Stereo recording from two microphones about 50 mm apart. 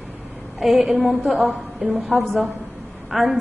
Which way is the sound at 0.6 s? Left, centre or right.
Centre.